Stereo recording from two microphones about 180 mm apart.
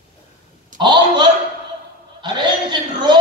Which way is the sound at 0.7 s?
25° right (ahead or behind).